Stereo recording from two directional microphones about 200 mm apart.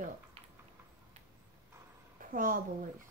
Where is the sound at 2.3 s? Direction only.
45° right (ahead or behind).